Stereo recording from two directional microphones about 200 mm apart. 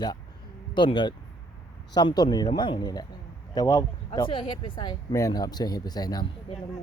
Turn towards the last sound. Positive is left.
turn(degrees=25)  # may be behind; listen again after turning